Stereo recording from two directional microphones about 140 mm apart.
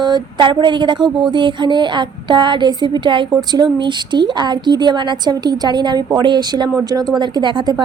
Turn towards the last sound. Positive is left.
turn(degrees=-30)  # may be behind; listen again after turning